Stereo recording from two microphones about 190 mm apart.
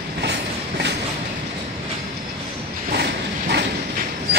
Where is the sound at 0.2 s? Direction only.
65° right (ahead or behind).